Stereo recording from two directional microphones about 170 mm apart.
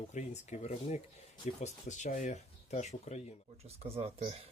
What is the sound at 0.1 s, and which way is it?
Speech, 45° left (ahead or behind).